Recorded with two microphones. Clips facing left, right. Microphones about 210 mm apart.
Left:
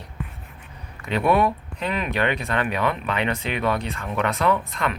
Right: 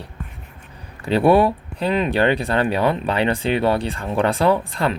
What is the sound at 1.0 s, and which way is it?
A man's voice, 30° right (ahead or behind).